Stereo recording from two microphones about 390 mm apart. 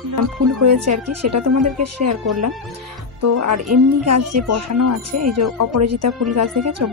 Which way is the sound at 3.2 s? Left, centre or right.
Right.